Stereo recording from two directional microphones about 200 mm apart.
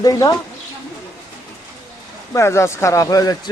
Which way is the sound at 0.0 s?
20° left (ahead or behind).